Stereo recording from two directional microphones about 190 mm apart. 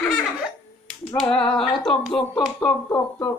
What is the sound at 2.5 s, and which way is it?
Speech, 10° left (ahead or behind).